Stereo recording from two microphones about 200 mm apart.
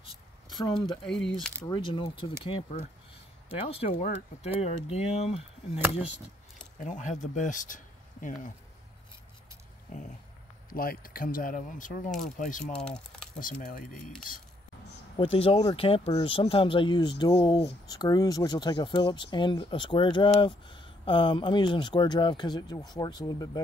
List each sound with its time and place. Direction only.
0.7 s speech: 5° left (ahead or behind)
1.7 s speech: 25° left (ahead or behind)
6.8 s speech: 40° left (ahead or behind)
10.7 s speech: 45° left (ahead or behind)
12.7 s speech: 5° left (ahead or behind)
13.4 s speech: 45° left (ahead or behind)
15.1 s speech: 30° left (ahead or behind)